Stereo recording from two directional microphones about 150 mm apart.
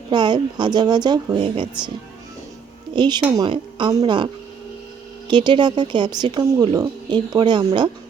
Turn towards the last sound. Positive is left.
turn(degrees=-30)  # may be behind; listen again after turning